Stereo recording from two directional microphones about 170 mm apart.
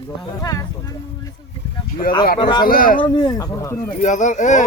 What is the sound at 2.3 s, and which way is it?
Speech, 25° left (ahead or behind).